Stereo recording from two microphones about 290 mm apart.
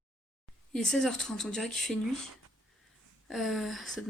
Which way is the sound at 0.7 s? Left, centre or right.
Centre.